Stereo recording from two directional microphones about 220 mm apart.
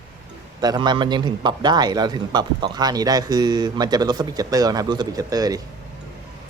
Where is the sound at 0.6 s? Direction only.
20° right (ahead or behind).